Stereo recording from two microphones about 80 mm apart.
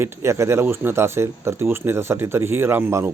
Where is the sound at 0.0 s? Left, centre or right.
Right.